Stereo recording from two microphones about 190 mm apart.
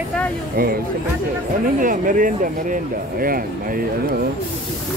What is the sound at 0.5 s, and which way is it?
Speech, 50° right (ahead or behind).